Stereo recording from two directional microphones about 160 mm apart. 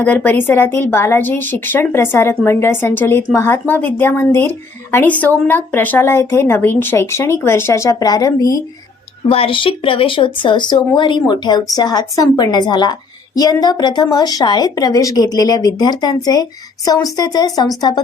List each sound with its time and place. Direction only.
0.0 s a woman's voice: 10° left (ahead or behind)
9.3 s speech: 35° left (ahead or behind)